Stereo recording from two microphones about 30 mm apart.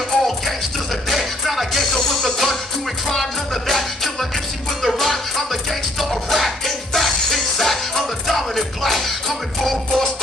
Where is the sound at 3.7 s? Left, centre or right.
Centre.